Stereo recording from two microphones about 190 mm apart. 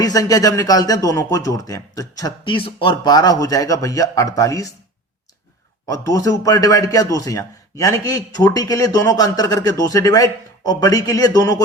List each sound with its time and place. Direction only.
0.0 s a man's voice: 20° left (ahead or behind)
5.8 s a man's voice: 15° left (ahead or behind)